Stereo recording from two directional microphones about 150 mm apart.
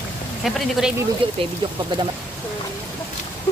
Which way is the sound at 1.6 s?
35° right (ahead or behind).